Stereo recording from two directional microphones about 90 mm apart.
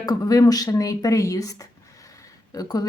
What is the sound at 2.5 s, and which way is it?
Speech, 45° left (ahead or behind).